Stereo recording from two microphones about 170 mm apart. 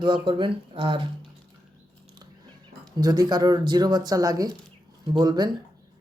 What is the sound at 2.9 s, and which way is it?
Speech, 25° right (ahead or behind).